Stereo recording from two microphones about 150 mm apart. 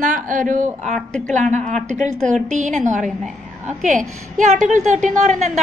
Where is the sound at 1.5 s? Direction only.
50° right (ahead or behind).